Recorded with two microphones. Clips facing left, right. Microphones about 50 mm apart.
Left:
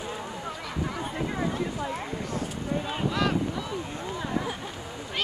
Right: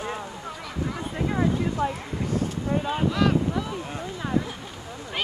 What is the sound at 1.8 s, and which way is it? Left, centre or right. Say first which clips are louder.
Speech: right 6 dB; right.